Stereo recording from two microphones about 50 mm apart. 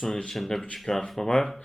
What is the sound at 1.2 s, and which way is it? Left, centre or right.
Mantra, centre.